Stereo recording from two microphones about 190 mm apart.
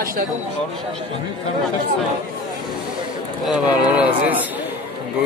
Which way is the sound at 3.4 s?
5° right (ahead or behind).